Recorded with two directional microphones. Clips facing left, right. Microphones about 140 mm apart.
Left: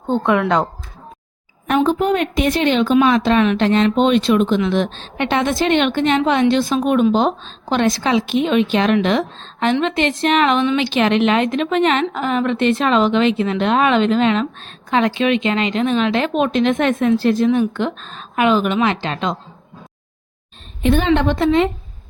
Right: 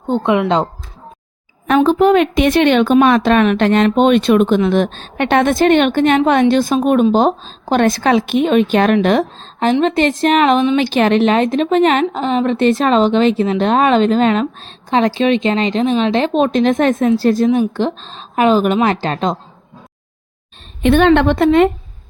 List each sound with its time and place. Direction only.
0.1 s speech: 20° right (ahead or behind)
1.7 s a woman's voice: 85° right; by 19.4 s 40° right (ahead or behind)
20.8 s speech: 70° right (ahead or behind); by 21.7 s 55° right (ahead or behind)